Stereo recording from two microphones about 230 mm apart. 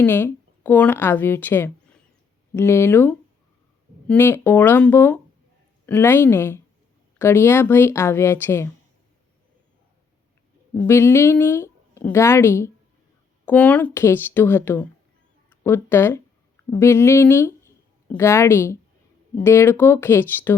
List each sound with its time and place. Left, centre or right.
0.0 s a woman's voice: centre
10.8 s a woman's voice: centre